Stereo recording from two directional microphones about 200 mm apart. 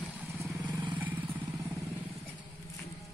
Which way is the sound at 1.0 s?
10° right (ahead or behind).